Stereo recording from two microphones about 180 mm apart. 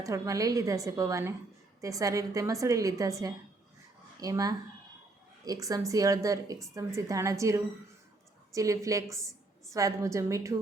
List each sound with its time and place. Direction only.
0.0 s a woman's voice: 20° right (ahead or behind)